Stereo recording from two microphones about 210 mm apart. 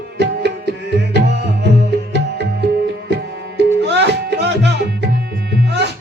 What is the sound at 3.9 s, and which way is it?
Music, 55° right (ahead or behind).